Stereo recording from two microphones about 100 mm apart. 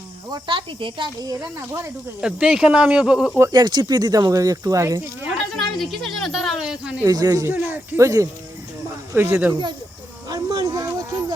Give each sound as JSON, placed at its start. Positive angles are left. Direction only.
{"t": 0.3, "sound": "speech", "side_deg": -45}
{"t": 0.5, "sound": "speech", "side_deg": -60}
{"t": 1.2, "sound": "speech", "side_deg": -40}
{"t": 2.2, "sound": "speech", "side_deg": -10}
{"t": 3.5, "sound": "speech", "side_deg": -45}
{"t": 5.5, "sound": "speech", "side_deg": 0}
{"t": 7.1, "sound": "speech", "side_deg": -35}
{"t": 7.5, "sound": "speech", "side_deg": -20}
{"t": 8.0, "sound": "speech", "side_deg": -30}
{"t": 10.2, "sound": "a sound", "side_deg": -40}